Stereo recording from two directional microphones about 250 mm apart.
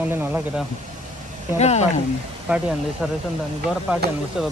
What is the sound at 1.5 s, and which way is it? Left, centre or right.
Speech, left.